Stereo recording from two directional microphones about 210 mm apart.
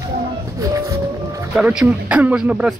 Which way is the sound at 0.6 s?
15° right (ahead or behind).